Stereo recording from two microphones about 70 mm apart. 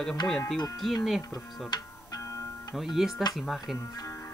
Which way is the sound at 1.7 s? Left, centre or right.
Left.